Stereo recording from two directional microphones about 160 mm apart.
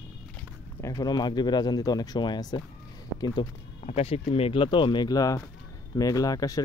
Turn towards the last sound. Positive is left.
turn(degrees=20)  # may be behind; listen again after turning